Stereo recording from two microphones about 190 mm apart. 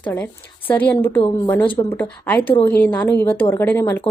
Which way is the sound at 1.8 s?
10° left (ahead or behind).